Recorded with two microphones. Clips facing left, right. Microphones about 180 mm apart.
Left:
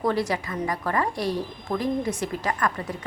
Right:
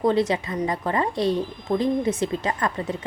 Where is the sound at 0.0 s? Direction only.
20° right (ahead or behind).